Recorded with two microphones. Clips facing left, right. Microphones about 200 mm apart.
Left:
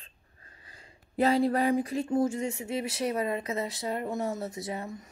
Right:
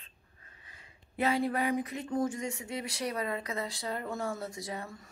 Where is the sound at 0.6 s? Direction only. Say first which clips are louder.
Left 5 dB; 35° left (ahead or behind); by 5.1 s 20° left (ahead or behind).